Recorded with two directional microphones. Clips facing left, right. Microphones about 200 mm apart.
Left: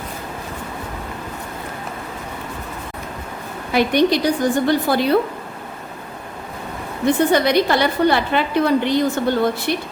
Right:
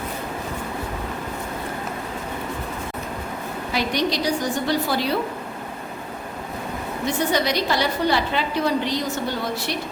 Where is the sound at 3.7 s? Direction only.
55° left (ahead or behind).